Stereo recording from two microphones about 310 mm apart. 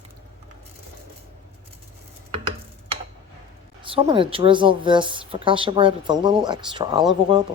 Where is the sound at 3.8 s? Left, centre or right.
Centre.